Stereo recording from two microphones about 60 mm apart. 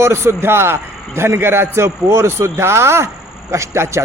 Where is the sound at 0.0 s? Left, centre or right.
Right.